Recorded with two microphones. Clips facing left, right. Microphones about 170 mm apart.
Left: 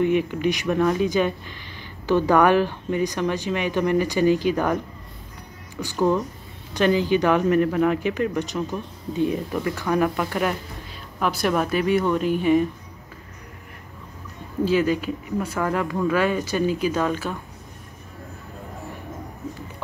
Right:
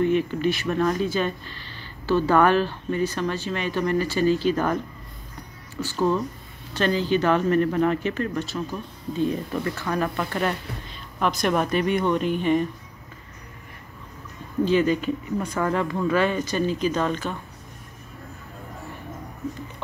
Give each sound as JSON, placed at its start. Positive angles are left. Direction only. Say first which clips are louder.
{"t": 0.0, "sound": "speech", "louder": "left 1 dB", "side_deg": 15}
{"t": 5.8, "sound": "speech", "louder": "left 2 dB", "side_deg": 15}
{"t": 14.6, "sound": "speech", "louder": "even", "side_deg": 5}